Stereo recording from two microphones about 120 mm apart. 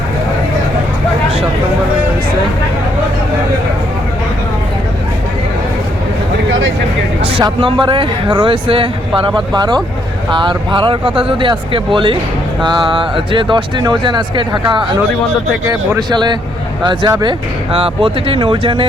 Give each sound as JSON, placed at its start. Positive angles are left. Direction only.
{"t": 7.6, "sound": "speech", "side_deg": -45}
{"t": 16.0, "sound": "speech", "side_deg": -35}
{"t": 17.7, "sound": "speech", "side_deg": -50}